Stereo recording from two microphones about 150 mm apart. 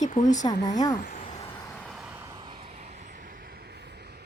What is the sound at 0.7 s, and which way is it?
Speech, 25° left (ahead or behind).